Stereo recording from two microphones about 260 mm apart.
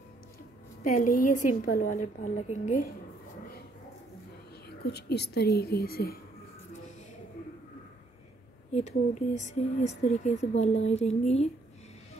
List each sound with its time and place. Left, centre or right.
0.9 s a woman's voice: left
4.6 s a woman's voice: left
8.7 s speech: left